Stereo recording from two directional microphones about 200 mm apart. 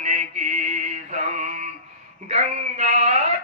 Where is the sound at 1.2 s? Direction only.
35° right (ahead or behind).